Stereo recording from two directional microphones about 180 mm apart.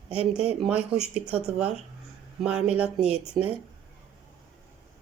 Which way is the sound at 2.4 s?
5° right (ahead or behind).